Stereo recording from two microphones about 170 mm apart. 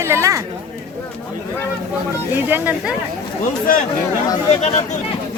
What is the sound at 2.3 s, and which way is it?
Speech, 10° right (ahead or behind).